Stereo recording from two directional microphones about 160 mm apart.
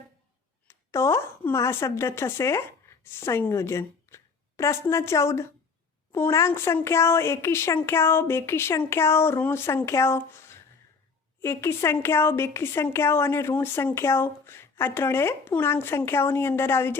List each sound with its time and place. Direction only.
0.7 s speech: 15° left (ahead or behind)